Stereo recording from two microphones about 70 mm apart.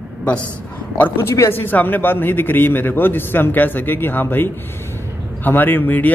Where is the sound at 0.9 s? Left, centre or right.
Left.